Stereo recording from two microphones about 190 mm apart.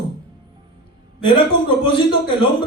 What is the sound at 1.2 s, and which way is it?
Speech, 25° left (ahead or behind).